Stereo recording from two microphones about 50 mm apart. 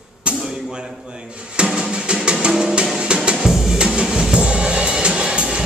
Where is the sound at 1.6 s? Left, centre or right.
Centre.